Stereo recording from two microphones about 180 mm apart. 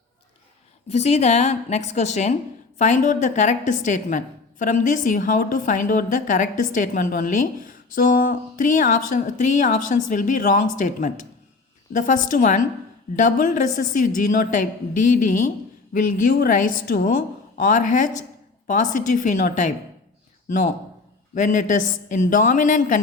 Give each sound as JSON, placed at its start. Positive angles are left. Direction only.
{"t": 0.9, "sound": "a woman's voice", "side_deg": 35}
{"t": 21.3, "sound": "a woman's voice", "side_deg": 45}